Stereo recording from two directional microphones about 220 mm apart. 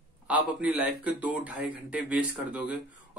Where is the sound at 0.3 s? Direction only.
5° right (ahead or behind).